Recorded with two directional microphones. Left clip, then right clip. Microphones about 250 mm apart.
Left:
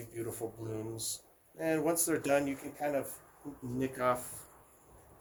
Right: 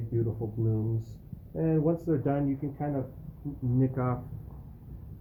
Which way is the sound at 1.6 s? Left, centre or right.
Left.